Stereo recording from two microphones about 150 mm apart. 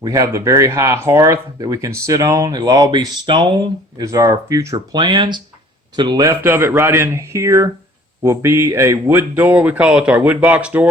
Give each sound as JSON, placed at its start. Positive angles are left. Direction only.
{"t": 0.0, "sound": "speech", "side_deg": -20}
{"t": 6.4, "sound": "speech", "side_deg": -15}